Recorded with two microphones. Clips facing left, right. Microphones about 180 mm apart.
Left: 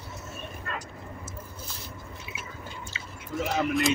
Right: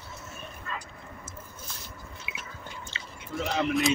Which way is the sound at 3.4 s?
5° left (ahead or behind).